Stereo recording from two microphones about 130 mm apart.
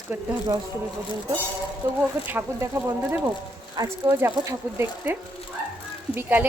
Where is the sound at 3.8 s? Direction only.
30° right (ahead or behind).